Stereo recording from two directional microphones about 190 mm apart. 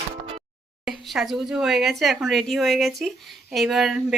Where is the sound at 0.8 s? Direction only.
Centre (ahead or behind).